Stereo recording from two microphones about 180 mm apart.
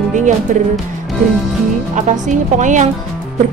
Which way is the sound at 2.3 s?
45° right (ahead or behind).